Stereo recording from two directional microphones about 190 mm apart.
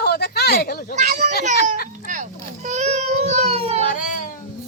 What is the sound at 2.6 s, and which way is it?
Child singing, 35° right (ahead or behind).